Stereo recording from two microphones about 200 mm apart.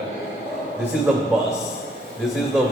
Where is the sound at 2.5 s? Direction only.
Centre (ahead or behind).